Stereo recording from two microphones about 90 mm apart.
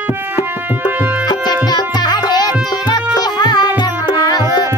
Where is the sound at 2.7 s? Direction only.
50° left (ahead or behind).